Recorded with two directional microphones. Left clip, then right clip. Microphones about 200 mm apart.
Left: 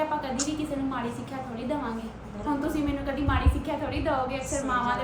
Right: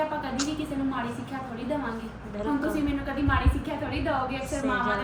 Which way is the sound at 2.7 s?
5° left (ahead or behind).